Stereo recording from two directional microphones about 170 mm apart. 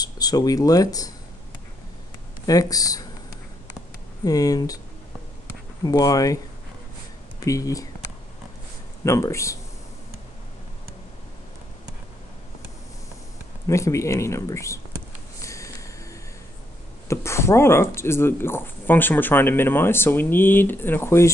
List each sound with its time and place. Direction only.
0.0 s speech: 20° left (ahead or behind)
2.4 s speech: 20° left (ahead or behind)
4.2 s speech: 20° left (ahead or behind)
5.9 s speech: 20° left (ahead or behind)
9.0 s speech: 15° left (ahead or behind)
13.7 s speech: 15° left (ahead or behind)
15.4 s snort: 20° left (ahead or behind)
17.1 s speech: 15° left (ahead or behind)